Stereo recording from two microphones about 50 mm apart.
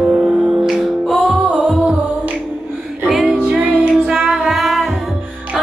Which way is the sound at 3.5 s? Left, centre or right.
Right.